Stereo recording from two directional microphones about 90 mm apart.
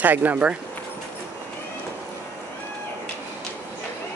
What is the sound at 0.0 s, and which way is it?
Speech, 20° right (ahead or behind).